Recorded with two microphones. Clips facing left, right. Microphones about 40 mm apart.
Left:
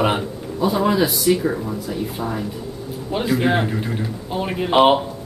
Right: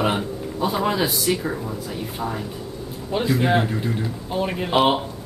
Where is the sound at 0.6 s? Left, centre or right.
Centre.